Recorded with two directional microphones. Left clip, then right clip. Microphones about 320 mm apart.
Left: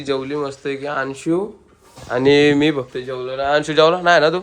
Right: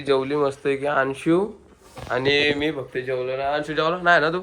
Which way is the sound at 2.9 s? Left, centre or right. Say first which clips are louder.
Even; centre.